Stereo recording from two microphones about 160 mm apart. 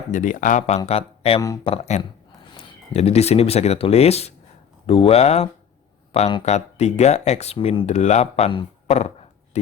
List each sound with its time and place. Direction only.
0.1 s speech: 55° left (ahead or behind)
0.9 s speech: 40° left (ahead or behind)